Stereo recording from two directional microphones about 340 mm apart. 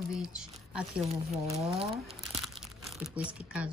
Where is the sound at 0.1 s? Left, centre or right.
Centre.